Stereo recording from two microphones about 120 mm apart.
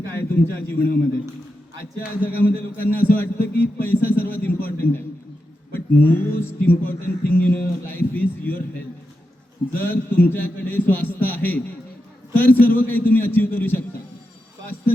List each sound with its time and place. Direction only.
0.1 s a man's voice: 20° left (ahead or behind)
9.7 s a man's voice: 15° left (ahead or behind)